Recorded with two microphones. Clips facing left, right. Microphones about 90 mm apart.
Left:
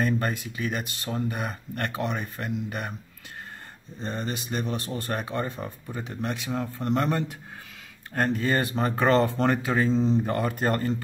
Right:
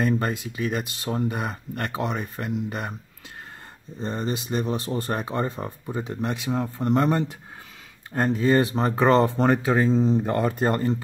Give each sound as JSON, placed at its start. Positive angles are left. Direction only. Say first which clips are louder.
{"t": 0.0, "sound": "speech", "louder": "right 2 dB", "side_deg": -25}
{"t": 4.0, "sound": "speech", "louder": "right 4 dB", "side_deg": -30}
{"t": 9.8, "sound": "speech", "louder": "right 2 dB", "side_deg": -10}
{"t": 10.2, "sound": "speech", "louder": "right 3 dB", "side_deg": -25}